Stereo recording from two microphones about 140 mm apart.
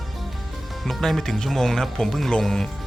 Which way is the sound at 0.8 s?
Centre (ahead or behind).